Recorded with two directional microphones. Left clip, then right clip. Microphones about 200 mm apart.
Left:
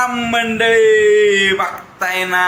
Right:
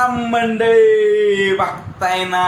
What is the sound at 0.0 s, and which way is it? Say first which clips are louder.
Speech: even; 5° left (ahead or behind).